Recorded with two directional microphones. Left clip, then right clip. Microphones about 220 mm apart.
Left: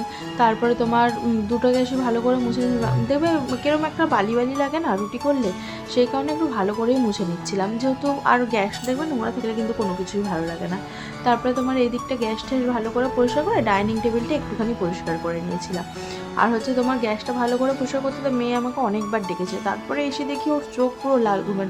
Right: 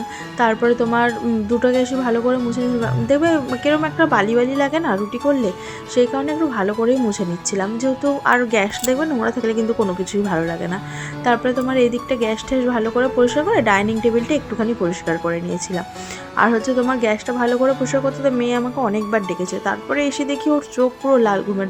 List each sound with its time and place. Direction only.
0.3 s speech: 5° right (ahead or behind)
16.4 s speech: 15° right (ahead or behind)